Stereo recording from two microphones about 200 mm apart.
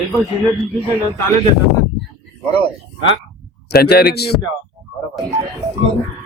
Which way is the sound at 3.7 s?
50° left (ahead or behind).